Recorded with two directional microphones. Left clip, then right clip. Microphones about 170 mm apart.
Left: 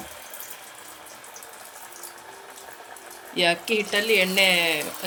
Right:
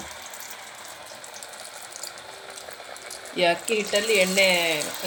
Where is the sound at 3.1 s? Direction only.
5° right (ahead or behind).